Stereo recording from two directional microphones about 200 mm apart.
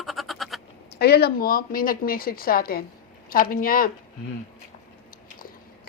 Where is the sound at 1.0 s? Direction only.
50° left (ahead or behind).